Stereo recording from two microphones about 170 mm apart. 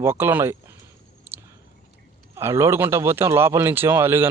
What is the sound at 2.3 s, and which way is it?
Speech, 15° right (ahead or behind).